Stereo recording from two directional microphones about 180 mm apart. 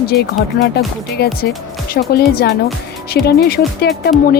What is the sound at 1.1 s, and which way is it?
Speech, 60° left (ahead or behind).